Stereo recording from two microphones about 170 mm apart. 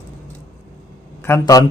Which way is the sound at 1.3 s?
20° left (ahead or behind).